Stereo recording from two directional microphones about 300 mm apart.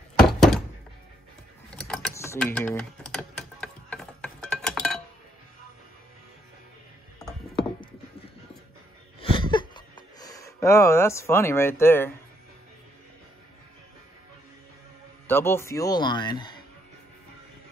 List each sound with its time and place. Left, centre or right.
0.3 s thunk: centre
1.7 s typing: centre
9.2 s a sound: centre
15.2 s speech: centre